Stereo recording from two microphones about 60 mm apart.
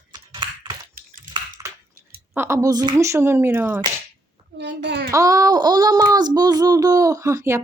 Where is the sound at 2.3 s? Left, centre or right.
Right.